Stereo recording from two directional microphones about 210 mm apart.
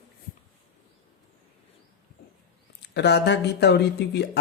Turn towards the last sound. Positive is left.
turn(degrees=50)  # may be behind; listen again after turning